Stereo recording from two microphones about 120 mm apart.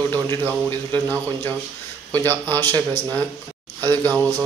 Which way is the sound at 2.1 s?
15° left (ahead or behind).